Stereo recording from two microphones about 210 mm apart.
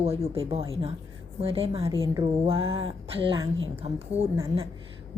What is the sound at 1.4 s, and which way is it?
A woman's voice, 25° right (ahead or behind).